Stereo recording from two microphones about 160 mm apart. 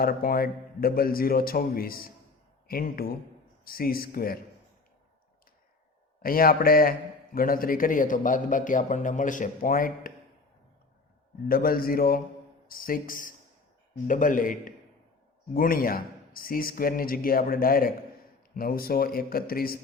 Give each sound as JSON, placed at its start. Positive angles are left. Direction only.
{"t": 0.0, "sound": "a man's voice", "side_deg": 65}
{"t": 6.2, "sound": "a man's voice", "side_deg": 65}
{"t": 11.4, "sound": "a man's voice", "side_deg": 65}